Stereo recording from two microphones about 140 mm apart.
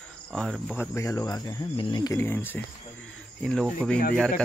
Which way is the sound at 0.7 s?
20° left (ahead or behind).